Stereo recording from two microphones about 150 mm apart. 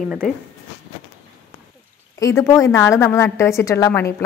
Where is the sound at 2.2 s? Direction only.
20° left (ahead or behind).